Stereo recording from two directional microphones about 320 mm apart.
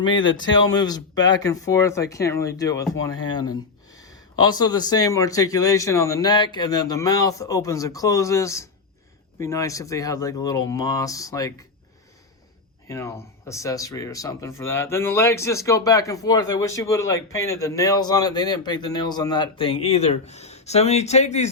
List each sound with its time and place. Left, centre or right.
0.0 s speech: centre
12.9 s speech: centre